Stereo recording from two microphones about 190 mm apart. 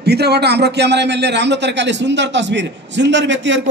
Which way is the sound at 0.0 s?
60° right (ahead or behind).